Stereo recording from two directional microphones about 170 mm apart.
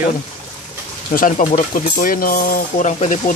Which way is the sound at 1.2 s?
50° left (ahead or behind).